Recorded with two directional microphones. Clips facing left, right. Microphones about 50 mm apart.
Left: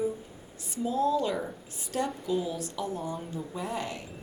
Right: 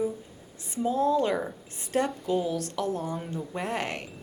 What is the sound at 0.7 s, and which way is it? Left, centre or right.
A woman's voice, right.